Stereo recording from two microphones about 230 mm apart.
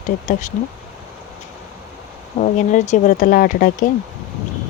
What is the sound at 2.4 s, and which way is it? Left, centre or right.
Speech, left.